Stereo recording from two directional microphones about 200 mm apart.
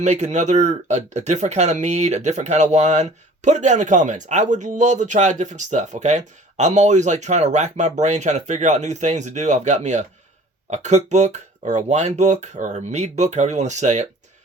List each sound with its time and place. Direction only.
0.0 s speech: 35° right (ahead or behind)